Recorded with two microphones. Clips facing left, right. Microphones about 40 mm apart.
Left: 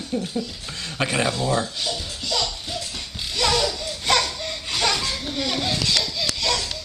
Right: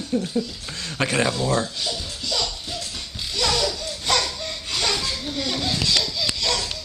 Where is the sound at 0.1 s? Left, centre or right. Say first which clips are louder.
Right 3 dB; centre.